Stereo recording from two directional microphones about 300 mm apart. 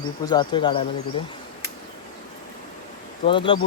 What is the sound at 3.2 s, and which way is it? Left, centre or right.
Speech, centre.